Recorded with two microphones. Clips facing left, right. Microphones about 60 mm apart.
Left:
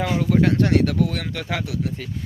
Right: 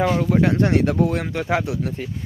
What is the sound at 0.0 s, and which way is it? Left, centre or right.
Speech, centre.